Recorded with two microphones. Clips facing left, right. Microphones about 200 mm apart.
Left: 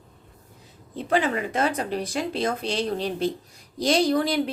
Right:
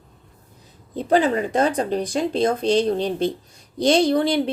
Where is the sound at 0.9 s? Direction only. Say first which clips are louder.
Right 5 dB; 35° right (ahead or behind).